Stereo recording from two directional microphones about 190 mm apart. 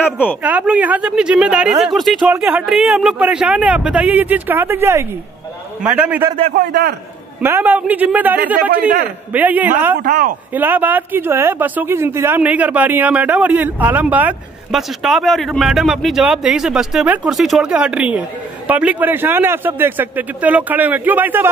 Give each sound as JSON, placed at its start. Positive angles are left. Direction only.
{"t": 0.0, "sound": "a woman's voice", "side_deg": 10}
{"t": 0.4, "sound": "speech", "side_deg": -5}
{"t": 6.5, "sound": "a man's voice", "side_deg": -55}
{"t": 7.4, "sound": "speech", "side_deg": -10}
{"t": 9.9, "sound": "speech", "side_deg": -50}
{"t": 10.5, "sound": "speech", "side_deg": -10}